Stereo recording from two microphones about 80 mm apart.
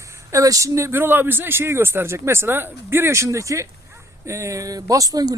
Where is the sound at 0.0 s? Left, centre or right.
Right.